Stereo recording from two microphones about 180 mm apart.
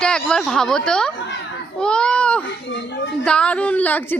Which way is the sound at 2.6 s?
75° left (ahead or behind).